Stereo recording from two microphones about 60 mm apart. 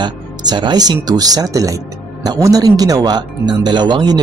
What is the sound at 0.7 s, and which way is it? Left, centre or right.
Speech, right.